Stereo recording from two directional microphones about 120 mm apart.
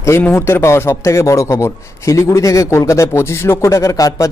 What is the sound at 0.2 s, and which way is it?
A man's voice, 20° left (ahead or behind).